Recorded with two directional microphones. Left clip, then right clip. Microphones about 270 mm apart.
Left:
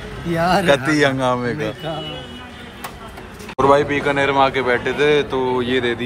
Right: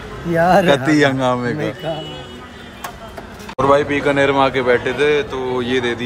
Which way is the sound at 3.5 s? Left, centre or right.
Centre.